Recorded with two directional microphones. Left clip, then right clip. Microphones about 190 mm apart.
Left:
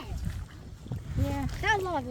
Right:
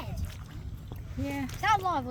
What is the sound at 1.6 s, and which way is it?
Speech, 45° right (ahead or behind).